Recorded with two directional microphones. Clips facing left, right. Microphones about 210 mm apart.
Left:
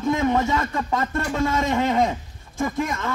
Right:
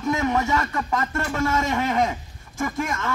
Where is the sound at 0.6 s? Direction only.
20° left (ahead or behind).